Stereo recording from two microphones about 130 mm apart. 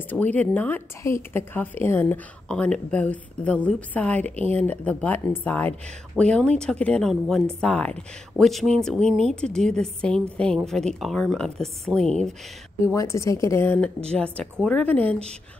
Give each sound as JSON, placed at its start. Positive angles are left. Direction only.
{"t": 0.1, "sound": "a woman's voice", "side_deg": 10}
{"t": 12.8, "sound": "a woman's voice", "side_deg": 25}
{"t": 14.1, "sound": "a woman's voice", "side_deg": 10}